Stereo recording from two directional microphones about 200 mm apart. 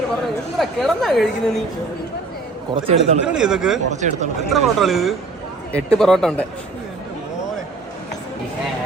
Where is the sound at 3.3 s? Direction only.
5° right (ahead or behind).